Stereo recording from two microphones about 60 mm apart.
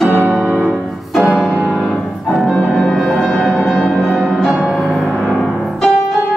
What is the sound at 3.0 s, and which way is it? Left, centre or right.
Music, centre.